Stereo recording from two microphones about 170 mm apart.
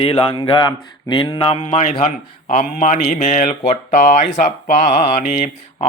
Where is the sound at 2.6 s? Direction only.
45° left (ahead or behind).